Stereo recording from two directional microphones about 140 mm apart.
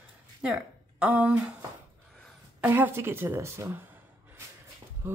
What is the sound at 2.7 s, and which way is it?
Speech, 15° right (ahead or behind).